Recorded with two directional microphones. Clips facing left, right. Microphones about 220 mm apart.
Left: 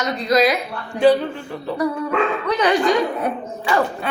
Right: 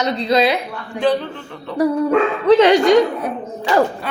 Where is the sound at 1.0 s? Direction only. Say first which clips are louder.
Left 3 dB; 5° left (ahead or behind).